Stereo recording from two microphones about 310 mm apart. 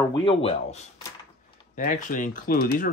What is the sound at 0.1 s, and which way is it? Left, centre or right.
Speech, centre.